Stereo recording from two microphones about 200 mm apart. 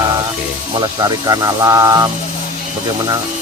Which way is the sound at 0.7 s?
20° right (ahead or behind).